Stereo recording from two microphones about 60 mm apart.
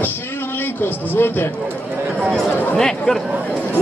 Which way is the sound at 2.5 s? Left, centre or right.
Left.